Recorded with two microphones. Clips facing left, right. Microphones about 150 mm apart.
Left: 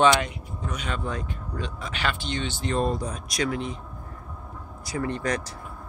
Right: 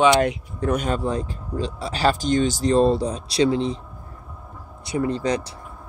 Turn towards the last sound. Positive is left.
turn(degrees=-25)  # may be behind; listen again after turning